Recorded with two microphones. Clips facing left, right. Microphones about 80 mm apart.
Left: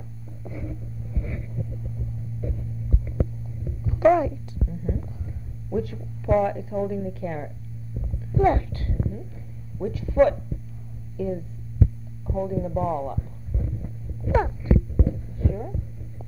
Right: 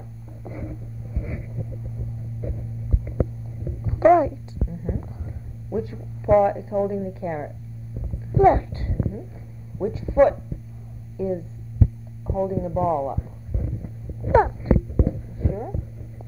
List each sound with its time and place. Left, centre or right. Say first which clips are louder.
0.4 s hum: right 1 dB; centre
2.4 s heart sounds: even; centre
4.2 s a sound: right 3 dB; centre
6.9 s a woman's voice: right 2 dB; right
8.3 s a sound: right 5 dB; centre
9.8 s a woman's voice: right 3 dB; centre
10.1 s speech: right 2 dB; centre
12.4 s music: right 3 dB; centre
14.2 s a sound: right 6 dB; right
15.0 s heart sounds: right 2 dB; centre